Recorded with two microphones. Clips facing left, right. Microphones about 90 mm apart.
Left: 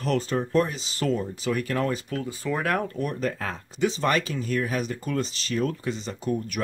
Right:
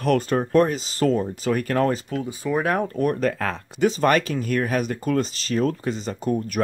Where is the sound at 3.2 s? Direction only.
85° right.